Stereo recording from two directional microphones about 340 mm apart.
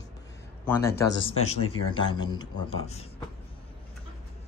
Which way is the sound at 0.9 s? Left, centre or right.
Left.